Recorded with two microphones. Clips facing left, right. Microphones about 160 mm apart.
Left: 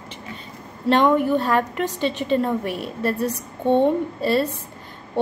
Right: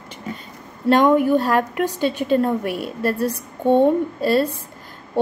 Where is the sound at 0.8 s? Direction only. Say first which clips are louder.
Right 2 dB; 5° right (ahead or behind).